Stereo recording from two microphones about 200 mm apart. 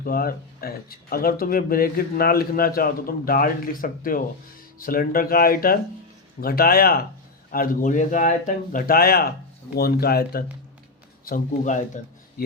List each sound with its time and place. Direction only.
0.0 s speech: 50° left (ahead or behind)
11.3 s speech: 40° left (ahead or behind)